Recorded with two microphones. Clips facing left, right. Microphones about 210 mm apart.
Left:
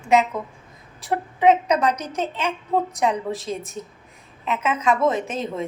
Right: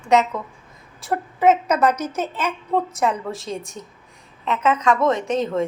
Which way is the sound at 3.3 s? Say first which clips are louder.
Left 1 dB; centre (ahead or behind).